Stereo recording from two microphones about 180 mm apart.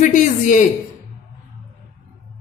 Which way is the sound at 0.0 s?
45° left (ahead or behind).